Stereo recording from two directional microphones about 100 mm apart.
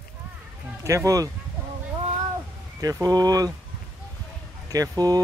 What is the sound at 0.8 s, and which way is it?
Speech, 30° right (ahead or behind).